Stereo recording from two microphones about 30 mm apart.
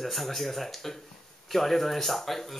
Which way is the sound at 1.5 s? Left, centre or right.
Centre.